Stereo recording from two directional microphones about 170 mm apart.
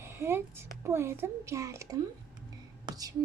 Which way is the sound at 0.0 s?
15° right (ahead or behind).